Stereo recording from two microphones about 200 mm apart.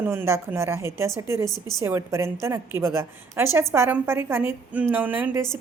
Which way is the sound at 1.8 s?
15° right (ahead or behind).